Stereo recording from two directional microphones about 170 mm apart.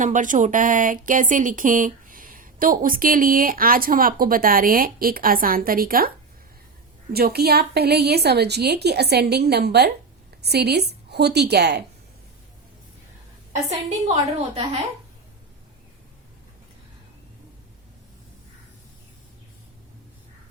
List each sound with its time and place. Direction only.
0.0 s speech: 50° right (ahead or behind)
7.1 s a woman's voice: 65° right (ahead or behind)
13.7 s a woman's voice: 40° right (ahead or behind)